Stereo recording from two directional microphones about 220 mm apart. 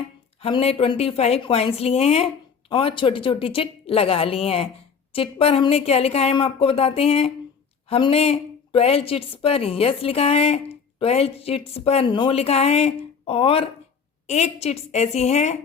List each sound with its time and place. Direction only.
0.3 s a woman's voice: 25° left (ahead or behind)